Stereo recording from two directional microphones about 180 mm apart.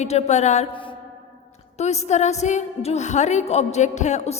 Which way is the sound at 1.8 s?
40° left (ahead or behind).